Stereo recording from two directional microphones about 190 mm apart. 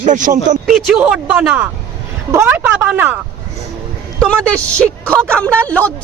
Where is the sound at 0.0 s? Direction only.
40° right (ahead or behind).